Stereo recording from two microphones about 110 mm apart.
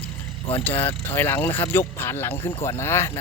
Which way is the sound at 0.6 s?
15° left (ahead or behind).